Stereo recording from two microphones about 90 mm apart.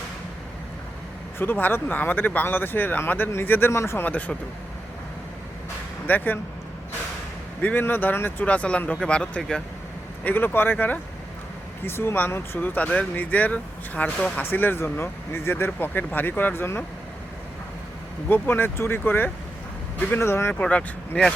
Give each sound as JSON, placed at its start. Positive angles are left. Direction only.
{"t": 1.4, "sound": "speech", "side_deg": 20}
{"t": 6.1, "sound": "speech", "side_deg": 20}
{"t": 7.6, "sound": "speech", "side_deg": 20}
{"t": 10.2, "sound": "speech", "side_deg": 20}
{"t": 18.3, "sound": "speech", "side_deg": 20}
{"t": 20.5, "sound": "speech", "side_deg": 15}